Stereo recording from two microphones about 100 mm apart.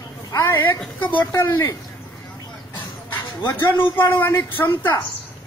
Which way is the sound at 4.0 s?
20° left (ahead or behind).